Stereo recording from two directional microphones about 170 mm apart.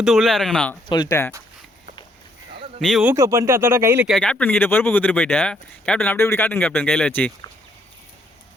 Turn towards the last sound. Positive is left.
turn(degrees=10)  # may be behind; listen again after turning